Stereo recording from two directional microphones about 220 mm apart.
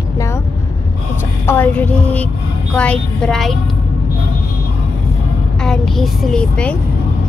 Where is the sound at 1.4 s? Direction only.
10° left (ahead or behind).